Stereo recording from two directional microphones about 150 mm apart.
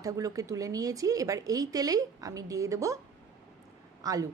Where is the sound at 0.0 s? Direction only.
20° right (ahead or behind).